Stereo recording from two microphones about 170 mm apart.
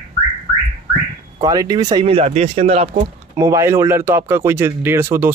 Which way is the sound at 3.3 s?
20° right (ahead or behind).